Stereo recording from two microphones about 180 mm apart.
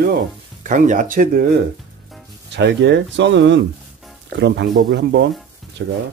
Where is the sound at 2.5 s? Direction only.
70° right (ahead or behind).